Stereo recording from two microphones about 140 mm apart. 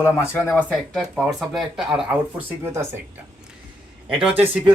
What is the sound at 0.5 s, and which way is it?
Speech, centre (ahead or behind).